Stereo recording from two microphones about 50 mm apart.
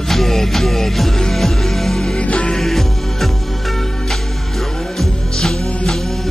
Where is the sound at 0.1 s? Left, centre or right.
Centre.